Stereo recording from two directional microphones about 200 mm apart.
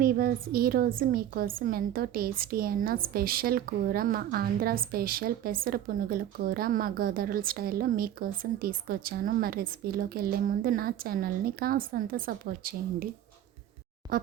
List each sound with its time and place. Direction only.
0.0 s a woman's voice: 45° right (ahead or behind)
14.1 s speech: 45° right (ahead or behind)